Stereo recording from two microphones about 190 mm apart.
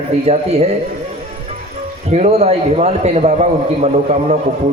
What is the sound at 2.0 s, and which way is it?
A man's voice, 35° right (ahead or behind).